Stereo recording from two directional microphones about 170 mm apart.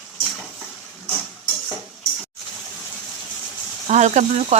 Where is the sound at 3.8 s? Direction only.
45° right (ahead or behind).